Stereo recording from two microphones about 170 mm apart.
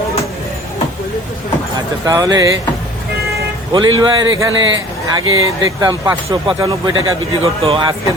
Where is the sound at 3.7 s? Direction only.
25° right (ahead or behind).